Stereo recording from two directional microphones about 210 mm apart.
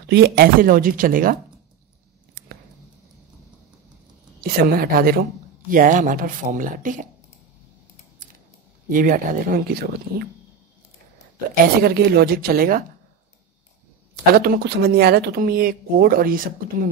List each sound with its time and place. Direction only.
0.1 s speech: 45° right (ahead or behind)
2.3 s a sound: 45° right (ahead or behind)
4.4 s speech: 45° right (ahead or behind)
8.8 s speech: 40° right (ahead or behind)
11.6 s speech: 45° right (ahead or behind)
14.3 s speech: 45° right (ahead or behind)